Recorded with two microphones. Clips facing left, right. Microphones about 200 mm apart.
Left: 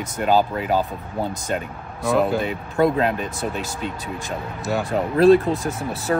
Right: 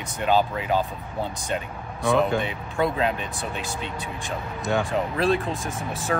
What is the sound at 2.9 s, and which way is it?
Speech, 45° left (ahead or behind).